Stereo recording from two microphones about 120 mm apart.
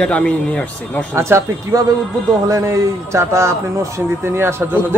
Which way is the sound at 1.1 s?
20° right (ahead or behind).